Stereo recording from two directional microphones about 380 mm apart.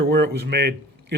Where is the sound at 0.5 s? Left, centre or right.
Right.